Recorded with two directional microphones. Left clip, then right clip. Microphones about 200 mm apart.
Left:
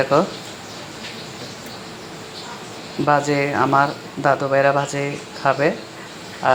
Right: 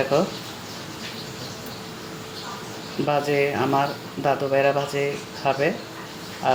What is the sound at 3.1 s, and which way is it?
Speech, 10° left (ahead or behind).